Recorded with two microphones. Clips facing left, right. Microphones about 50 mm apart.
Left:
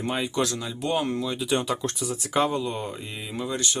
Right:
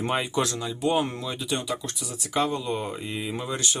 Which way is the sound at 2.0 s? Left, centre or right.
Left.